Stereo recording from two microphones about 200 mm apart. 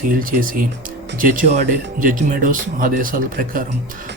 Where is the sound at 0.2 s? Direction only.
45° right (ahead or behind).